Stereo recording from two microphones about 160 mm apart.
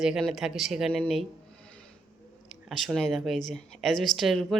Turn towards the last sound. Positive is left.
turn(degrees=0)  # may be behind; listen again after turning